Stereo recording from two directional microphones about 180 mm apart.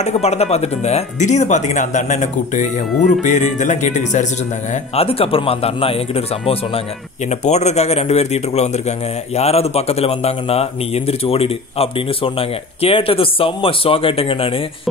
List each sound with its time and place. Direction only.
0.0 s a man's voice: 35° left (ahead or behind)